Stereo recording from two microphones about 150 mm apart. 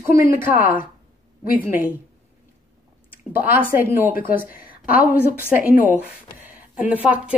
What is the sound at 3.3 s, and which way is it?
A woman's voice, 15° right (ahead or behind).